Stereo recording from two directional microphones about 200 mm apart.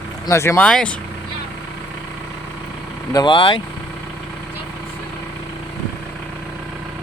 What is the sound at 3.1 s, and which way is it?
Speech, 20° left (ahead or behind).